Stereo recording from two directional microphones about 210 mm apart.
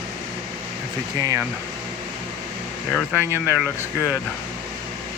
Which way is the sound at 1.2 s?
15° right (ahead or behind).